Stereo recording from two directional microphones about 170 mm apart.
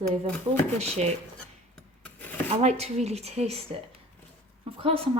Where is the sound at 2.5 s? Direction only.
40° right (ahead or behind).